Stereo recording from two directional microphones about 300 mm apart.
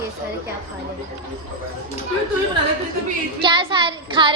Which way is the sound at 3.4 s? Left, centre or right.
Centre.